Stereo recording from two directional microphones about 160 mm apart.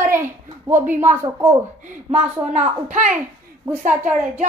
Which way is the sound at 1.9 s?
45° right (ahead or behind).